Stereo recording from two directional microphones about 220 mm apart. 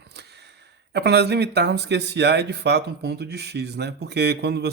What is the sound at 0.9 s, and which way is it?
Speech, 50° right (ahead or behind).